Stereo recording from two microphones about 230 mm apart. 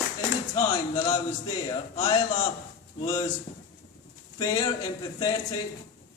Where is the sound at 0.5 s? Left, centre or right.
Centre.